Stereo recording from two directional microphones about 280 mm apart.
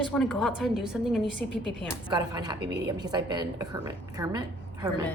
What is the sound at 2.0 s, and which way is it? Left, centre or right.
A woman's voice, centre.